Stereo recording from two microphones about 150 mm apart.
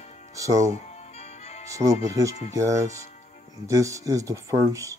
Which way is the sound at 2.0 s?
20° right (ahead or behind).